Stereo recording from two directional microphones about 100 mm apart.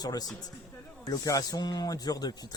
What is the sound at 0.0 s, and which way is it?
Speech, 40° left (ahead or behind).